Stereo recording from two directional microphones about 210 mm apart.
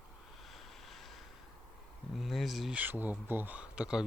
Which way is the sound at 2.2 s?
Centre (ahead or behind).